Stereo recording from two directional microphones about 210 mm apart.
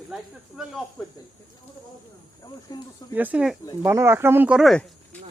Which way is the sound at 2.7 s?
20° left (ahead or behind).